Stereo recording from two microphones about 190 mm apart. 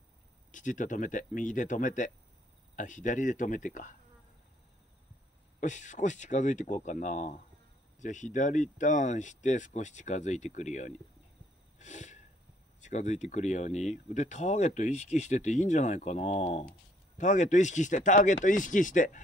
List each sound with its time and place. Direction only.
0.5 s speech: 40° left (ahead or behind)
5.6 s speech: 40° left (ahead or behind)
11.8 s wheeze: 40° left (ahead or behind)
12.8 s speech: 40° left (ahead or behind)